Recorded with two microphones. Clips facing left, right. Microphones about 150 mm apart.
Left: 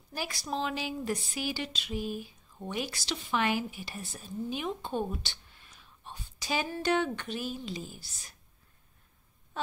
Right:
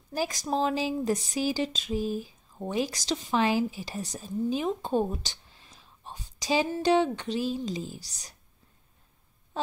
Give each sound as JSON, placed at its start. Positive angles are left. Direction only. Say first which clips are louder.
{"t": 0.1, "sound": "speech", "louder": "right 6 dB", "side_deg": -40}
{"t": 1.0, "sound": "speech", "louder": "right 6 dB", "side_deg": -20}
{"t": 1.4, "sound": "speech", "louder": "right 7 dB", "side_deg": -35}
{"t": 5.8, "sound": "a sound", "louder": "right 2 dB", "side_deg": -35}
{"t": 7.3, "sound": "speech", "louder": "right 6 dB", "side_deg": -30}